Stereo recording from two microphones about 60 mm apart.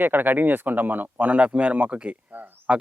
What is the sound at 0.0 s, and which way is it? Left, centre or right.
Speech, right.